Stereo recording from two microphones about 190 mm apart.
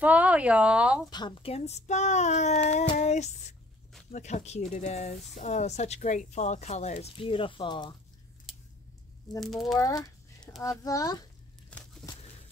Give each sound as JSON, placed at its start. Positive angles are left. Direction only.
{"t": 0.0, "sound": "speech", "side_deg": -5}
{"t": 1.1, "sound": "speech", "side_deg": 25}
{"t": 3.0, "sound": "a sound", "side_deg": 35}
{"t": 4.1, "sound": "speech", "side_deg": 35}
{"t": 9.4, "sound": "speech", "side_deg": 0}
{"t": 9.8, "sound": "speech", "side_deg": 20}
{"t": 11.7, "sound": "tearing", "side_deg": 5}